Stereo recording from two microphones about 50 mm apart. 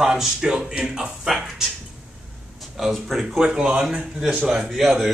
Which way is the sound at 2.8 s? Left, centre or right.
Centre.